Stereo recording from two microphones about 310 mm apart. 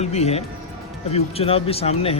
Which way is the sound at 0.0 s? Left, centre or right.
Left.